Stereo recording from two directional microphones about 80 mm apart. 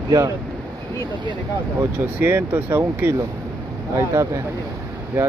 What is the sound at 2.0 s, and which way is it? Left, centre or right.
Speech, right.